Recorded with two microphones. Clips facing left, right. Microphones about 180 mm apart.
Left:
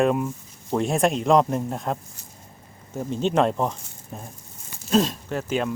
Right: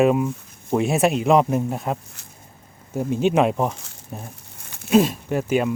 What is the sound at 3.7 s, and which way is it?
Speech, 80° right.